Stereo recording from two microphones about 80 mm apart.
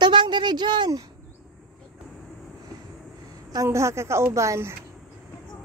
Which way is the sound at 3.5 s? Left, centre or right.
Right.